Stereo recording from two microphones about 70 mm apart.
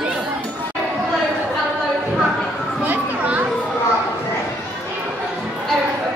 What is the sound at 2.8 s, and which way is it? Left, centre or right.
Children playing, right.